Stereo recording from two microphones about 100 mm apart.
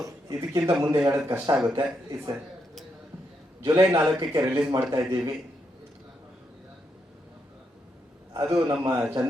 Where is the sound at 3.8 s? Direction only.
30° right (ahead or behind).